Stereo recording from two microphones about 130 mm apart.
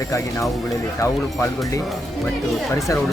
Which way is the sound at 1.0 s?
25° left (ahead or behind).